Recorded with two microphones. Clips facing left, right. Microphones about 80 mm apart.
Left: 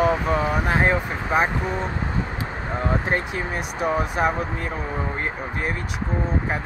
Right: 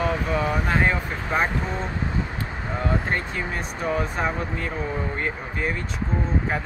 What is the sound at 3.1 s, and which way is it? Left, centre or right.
Speech, centre.